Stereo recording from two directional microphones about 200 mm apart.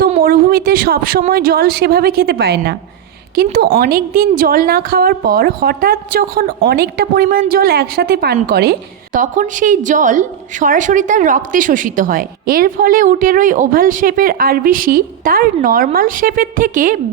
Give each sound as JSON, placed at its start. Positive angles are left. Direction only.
{"t": 0.2, "sound": "a woman's voice", "side_deg": -45}
{"t": 9.1, "sound": "a woman's voice", "side_deg": -40}